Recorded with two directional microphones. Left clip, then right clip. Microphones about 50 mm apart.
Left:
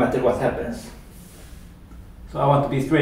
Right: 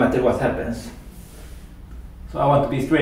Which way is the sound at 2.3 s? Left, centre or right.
Centre.